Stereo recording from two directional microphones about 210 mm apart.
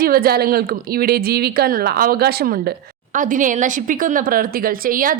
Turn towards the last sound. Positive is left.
turn(degrees=-40)  # may be behind; listen again after turning